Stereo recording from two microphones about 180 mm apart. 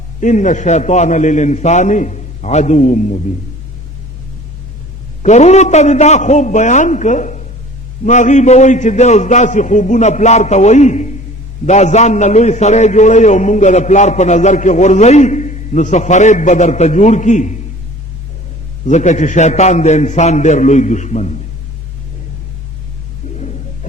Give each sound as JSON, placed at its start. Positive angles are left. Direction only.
{"t": 0.2, "sound": "a man's voice", "side_deg": 45}
{"t": 5.2, "sound": "a man's voice", "side_deg": 40}
{"t": 18.9, "sound": "a man's voice", "side_deg": 40}